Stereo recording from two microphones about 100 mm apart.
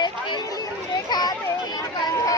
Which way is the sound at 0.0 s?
50° left (ahead or behind).